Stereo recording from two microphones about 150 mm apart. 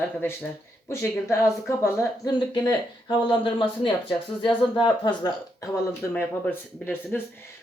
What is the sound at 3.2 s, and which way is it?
Speech, 35° left (ahead or behind).